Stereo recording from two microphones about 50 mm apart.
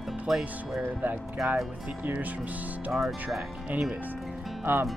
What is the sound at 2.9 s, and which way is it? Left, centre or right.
Speech, centre.